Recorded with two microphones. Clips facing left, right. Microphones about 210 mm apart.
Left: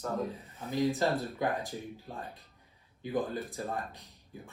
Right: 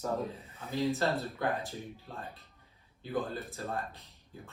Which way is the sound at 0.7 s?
15° left (ahead or behind).